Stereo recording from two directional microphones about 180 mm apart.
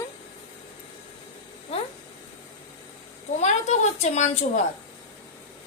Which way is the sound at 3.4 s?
40° left (ahead or behind).